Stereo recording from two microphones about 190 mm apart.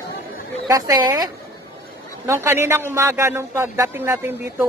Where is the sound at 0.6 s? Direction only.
20° right (ahead or behind).